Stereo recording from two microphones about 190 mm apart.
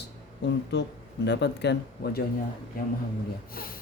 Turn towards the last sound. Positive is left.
turn(degrees=50)  # may be behind; listen again after turning